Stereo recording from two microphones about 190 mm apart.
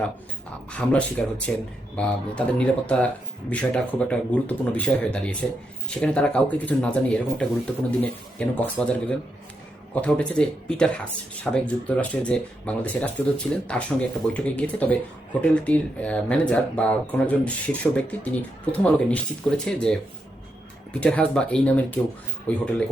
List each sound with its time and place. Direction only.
0.7 s speech: 5° left (ahead or behind)